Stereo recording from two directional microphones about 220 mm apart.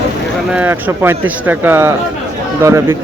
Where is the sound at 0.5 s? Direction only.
10° right (ahead or behind).